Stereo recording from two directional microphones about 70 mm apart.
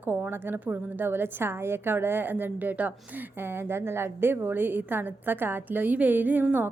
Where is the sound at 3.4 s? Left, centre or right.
Right.